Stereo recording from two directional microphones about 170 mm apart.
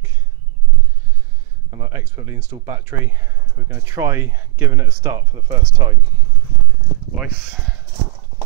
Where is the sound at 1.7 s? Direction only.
20° right (ahead or behind).